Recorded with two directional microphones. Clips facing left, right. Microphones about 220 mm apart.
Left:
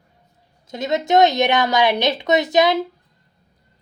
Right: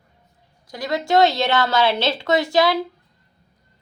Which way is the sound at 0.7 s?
20° left (ahead or behind).